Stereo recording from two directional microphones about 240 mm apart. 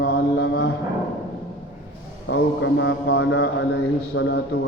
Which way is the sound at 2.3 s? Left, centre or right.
Left.